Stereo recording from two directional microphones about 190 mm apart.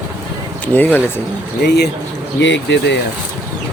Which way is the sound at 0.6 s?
10° left (ahead or behind).